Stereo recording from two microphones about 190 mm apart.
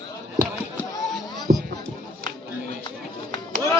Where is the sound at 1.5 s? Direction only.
50° right (ahead or behind).